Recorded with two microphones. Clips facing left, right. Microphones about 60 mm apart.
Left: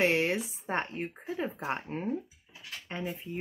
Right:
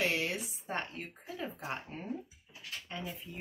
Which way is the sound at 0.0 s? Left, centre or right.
Left.